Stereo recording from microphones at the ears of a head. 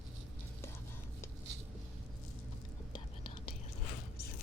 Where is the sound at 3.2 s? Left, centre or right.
Left.